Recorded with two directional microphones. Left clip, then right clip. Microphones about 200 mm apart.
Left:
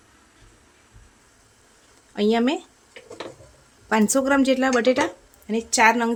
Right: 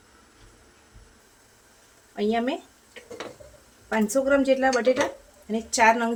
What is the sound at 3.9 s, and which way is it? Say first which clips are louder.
A woman's voice: left 2 dB; 45° left (ahead or behind).